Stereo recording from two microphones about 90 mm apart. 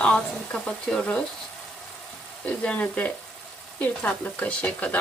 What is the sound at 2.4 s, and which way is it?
Speech, 15° left (ahead or behind).